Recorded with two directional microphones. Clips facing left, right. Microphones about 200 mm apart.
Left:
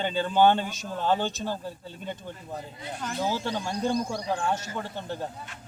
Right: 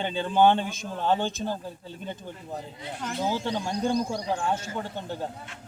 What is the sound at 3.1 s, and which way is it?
A man's voice, 20° right (ahead or behind).